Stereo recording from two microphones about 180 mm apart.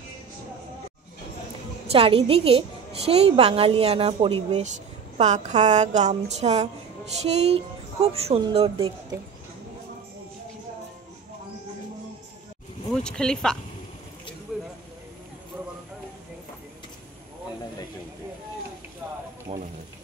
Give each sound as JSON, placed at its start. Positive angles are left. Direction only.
{"t": 1.9, "sound": "a woman's voice", "side_deg": -30}
{"t": 12.9, "sound": "speech", "side_deg": 5}
{"t": 14.5, "sound": "a sound", "side_deg": -5}
{"t": 19.5, "sound": "a woman's voice", "side_deg": -35}